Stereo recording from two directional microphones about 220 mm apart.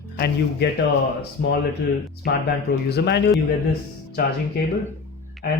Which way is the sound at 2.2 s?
45° left (ahead or behind).